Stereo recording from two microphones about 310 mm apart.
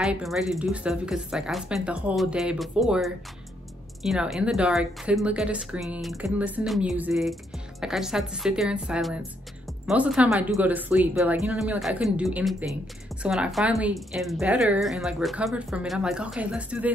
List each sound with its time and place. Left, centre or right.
0.0 s speech: centre